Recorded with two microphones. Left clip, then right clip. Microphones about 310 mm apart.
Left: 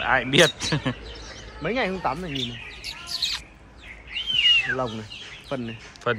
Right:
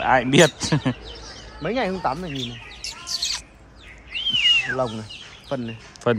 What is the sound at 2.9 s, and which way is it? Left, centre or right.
Bird, centre.